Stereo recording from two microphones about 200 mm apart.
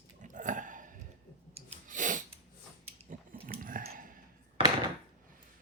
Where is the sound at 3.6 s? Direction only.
45° right (ahead or behind).